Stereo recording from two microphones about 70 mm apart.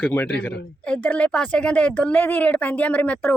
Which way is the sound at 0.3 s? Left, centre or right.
Centre.